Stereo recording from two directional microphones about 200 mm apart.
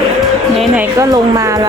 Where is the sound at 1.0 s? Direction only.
15° right (ahead or behind).